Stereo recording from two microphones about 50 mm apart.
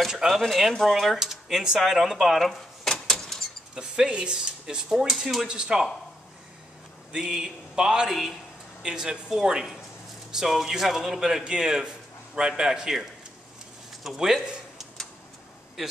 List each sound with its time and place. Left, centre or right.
0.1 s speech: centre
1.8 s door: centre
3.7 s speech: centre
5.5 s speech: centre
7.1 s speech: centre
8.1 s speech: centre
8.8 s speech: centre
14.0 s speech: centre